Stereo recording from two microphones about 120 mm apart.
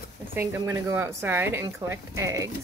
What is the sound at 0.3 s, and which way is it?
Speech, 20° right (ahead or behind).